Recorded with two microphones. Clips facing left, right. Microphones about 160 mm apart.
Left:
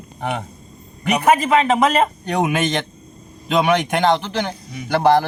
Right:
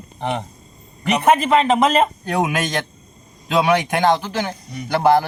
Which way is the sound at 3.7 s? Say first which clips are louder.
Right 1 dB; 10° right (ahead or behind).